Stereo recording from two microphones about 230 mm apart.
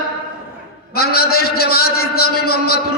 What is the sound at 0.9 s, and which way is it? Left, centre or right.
A man's voice, left.